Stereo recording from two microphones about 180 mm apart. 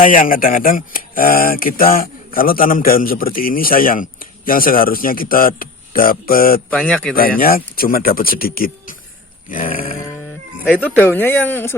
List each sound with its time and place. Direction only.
0.0 s speech: 50° left (ahead or behind)
6.7 s speech: 5° left (ahead or behind)
7.1 s speech: 55° left (ahead or behind)
10.7 s speech: 10° left (ahead or behind)